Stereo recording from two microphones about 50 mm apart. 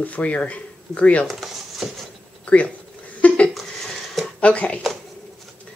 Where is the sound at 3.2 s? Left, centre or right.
Left.